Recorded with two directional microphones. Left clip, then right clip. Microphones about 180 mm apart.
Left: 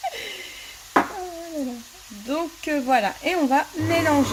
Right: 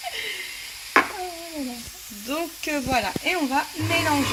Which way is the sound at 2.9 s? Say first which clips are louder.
Left 1 dB; 25° left (ahead or behind).